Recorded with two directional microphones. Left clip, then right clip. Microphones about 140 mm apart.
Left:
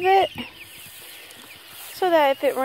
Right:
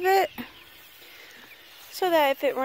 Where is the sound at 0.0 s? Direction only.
25° right (ahead or behind).